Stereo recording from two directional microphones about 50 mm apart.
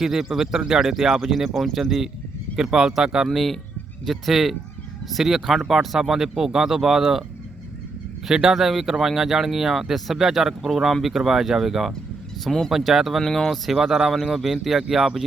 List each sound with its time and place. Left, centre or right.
0.0 s speech: centre
2.6 s speech: centre
3.2 s speech: centre
8.3 s speech: centre
12.5 s speech: centre
12.7 s speech: centre
13.2 s speech: centre
13.7 s speech: centre